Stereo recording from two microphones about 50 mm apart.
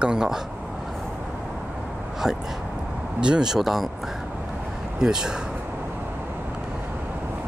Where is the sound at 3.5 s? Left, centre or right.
Centre.